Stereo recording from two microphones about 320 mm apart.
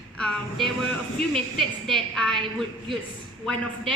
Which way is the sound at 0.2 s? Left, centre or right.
Centre.